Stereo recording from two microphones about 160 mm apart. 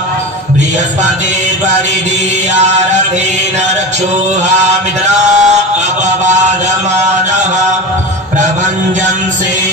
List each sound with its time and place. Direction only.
5.1 s chant: 50° right (ahead or behind)